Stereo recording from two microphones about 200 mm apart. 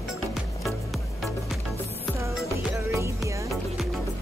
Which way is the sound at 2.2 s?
15° right (ahead or behind).